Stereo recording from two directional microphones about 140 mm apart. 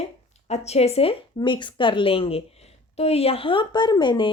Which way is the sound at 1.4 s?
35° left (ahead or behind).